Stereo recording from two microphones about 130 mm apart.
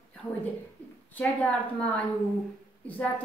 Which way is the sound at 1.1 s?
10° left (ahead or behind).